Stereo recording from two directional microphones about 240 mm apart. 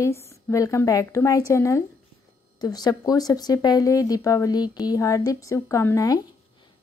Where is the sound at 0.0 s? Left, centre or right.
Centre.